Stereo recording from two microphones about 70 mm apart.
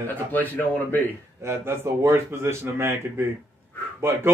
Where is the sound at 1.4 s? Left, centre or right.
Right.